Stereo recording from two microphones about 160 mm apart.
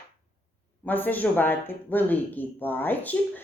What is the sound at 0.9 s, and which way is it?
Speech, 10° left (ahead or behind).